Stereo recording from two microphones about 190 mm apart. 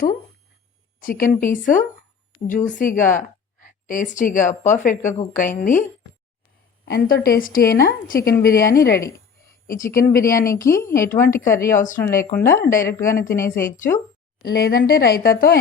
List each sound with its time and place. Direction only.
1.0 s a woman's voice: 45° left (ahead or behind)
6.8 s a woman's voice: 55° left (ahead or behind)
10.5 s a woman's voice: 15° left (ahead or behind)
13.1 s a woman's voice: 45° left (ahead or behind)
13.3 s a woman's voice: 15° left (ahead or behind)
14.5 s a woman's voice: 55° left (ahead or behind)